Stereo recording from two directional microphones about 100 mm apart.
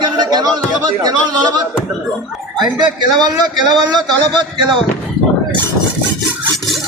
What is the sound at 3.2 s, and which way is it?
Speech, 45° right (ahead or behind).